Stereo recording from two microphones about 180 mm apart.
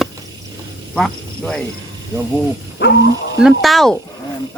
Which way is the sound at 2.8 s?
65° left (ahead or behind).